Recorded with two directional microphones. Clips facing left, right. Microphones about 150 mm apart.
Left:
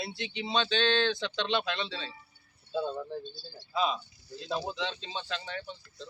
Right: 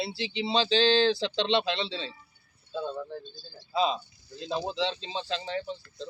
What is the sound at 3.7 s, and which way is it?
Speech, 30° right (ahead or behind).